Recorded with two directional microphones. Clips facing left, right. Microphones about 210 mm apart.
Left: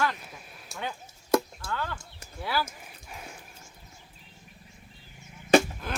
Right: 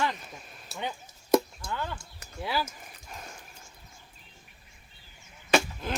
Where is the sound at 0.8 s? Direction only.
20° right (ahead or behind).